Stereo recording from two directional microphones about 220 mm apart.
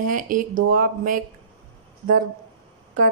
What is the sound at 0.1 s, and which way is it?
Speech, 35° right (ahead or behind).